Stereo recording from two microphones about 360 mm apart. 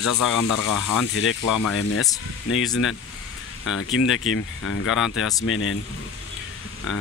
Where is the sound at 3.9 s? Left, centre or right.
Left.